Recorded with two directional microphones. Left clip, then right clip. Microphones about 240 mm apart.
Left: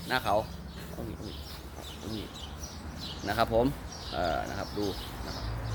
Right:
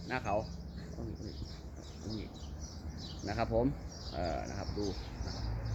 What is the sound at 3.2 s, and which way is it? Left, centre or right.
Speech, centre.